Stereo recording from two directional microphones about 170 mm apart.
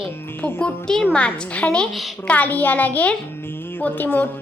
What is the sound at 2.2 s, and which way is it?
A woman's voice, 10° left (ahead or behind).